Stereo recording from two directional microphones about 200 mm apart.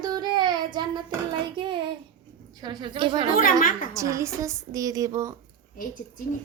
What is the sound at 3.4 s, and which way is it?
Speech, 45° left (ahead or behind).